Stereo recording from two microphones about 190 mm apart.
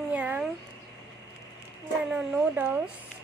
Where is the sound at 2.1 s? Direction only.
5° right (ahead or behind).